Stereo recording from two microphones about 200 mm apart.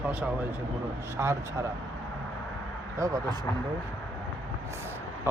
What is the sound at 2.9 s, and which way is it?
Speech, 15° right (ahead or behind).